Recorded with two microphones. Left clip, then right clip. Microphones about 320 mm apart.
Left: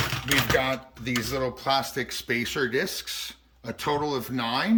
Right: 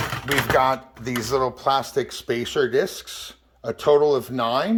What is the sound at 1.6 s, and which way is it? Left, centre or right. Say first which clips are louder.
Speech: right 4 dB; centre.